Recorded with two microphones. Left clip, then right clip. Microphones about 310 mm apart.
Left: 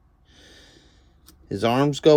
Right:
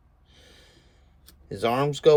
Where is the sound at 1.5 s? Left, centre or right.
Left.